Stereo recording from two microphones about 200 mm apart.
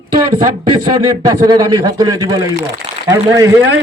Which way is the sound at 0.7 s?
20° right (ahead or behind).